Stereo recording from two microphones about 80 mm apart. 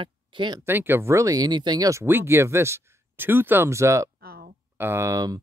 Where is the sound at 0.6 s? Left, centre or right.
Right.